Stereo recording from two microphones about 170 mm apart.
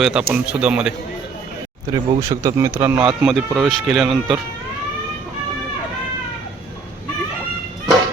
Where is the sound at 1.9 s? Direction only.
20° right (ahead or behind).